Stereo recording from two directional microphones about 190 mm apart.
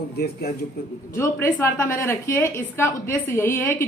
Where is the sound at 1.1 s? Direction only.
15° left (ahead or behind).